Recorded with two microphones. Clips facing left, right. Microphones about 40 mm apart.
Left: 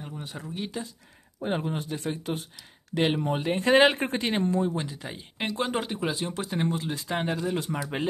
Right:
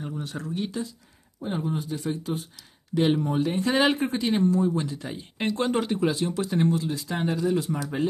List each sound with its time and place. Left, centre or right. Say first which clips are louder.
0.2 s speech: right 3 dB; centre
1.4 s speech: even; left
2.9 s speech: right 2 dB; left
4.7 s speech: right 4 dB; centre
5.0 s speech: right 4 dB; centre
6.9 s speech: right 1 dB; left